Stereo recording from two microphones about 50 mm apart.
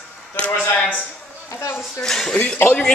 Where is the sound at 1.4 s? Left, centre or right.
Left.